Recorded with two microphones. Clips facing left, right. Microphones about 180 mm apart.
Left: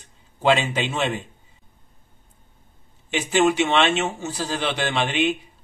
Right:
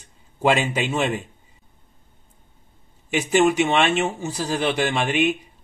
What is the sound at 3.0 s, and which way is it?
A man's voice, 5° right (ahead or behind).